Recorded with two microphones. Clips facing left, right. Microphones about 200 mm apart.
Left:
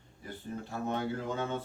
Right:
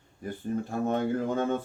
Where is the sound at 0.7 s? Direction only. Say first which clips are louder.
Right 5 dB; 50° right (ahead or behind).